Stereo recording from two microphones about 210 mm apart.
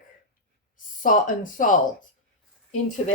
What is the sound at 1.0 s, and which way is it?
Speech, 40° left (ahead or behind).